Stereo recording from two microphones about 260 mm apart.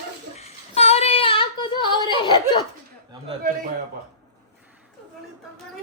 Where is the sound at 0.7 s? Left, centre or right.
Left.